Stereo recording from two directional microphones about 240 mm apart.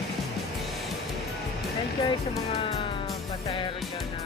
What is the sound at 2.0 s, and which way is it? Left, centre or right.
Speech, left.